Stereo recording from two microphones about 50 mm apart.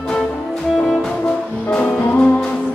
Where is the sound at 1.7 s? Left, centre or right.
Left.